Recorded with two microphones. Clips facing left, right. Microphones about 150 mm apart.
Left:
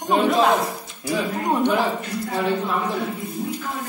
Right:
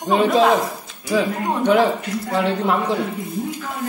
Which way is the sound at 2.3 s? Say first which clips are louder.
Right 4 dB; 90° right.